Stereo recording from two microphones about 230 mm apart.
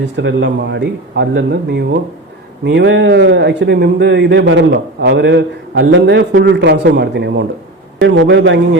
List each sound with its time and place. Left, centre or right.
0.0 s a man's voice: right